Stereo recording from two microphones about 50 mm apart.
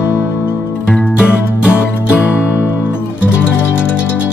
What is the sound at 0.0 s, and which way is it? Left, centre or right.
Music, left.